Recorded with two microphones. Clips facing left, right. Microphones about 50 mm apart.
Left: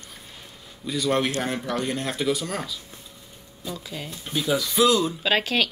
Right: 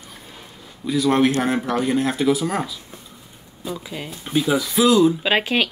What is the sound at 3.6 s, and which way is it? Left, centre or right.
Speech, centre.